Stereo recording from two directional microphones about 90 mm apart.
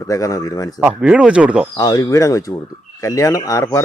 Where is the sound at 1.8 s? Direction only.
45° left (ahead or behind).